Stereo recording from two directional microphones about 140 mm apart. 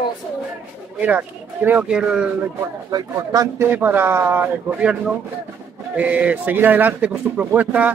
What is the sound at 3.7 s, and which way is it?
Speech, 15° right (ahead or behind).